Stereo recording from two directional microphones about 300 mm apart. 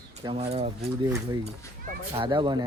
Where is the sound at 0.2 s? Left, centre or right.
Centre.